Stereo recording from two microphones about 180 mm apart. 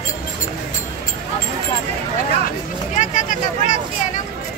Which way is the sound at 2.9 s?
45° left (ahead or behind).